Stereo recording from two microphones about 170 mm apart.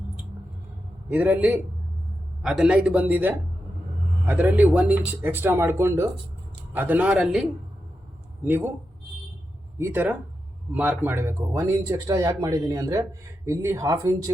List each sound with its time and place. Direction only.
1.1 s speech: 10° right (ahead or behind)
8.4 s speech: 10° right (ahead or behind)
9.7 s speech: 15° right (ahead or behind)